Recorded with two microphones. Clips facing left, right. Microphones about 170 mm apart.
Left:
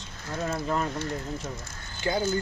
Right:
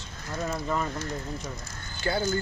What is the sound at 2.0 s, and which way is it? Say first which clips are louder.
Speech: left 1 dB; 20° left (ahead or behind).